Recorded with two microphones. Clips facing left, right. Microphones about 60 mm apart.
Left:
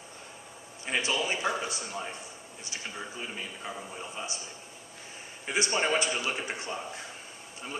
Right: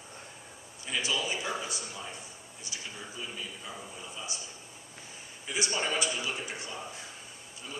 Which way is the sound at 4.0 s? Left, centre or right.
Left.